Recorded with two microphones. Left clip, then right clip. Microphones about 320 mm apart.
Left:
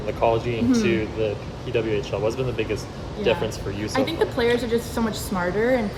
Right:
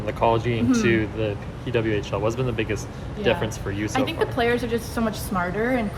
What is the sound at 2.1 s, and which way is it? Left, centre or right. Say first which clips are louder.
Speech: even; right.